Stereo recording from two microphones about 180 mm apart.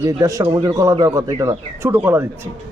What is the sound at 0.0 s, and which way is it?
A man's voice, 20° right (ahead or behind).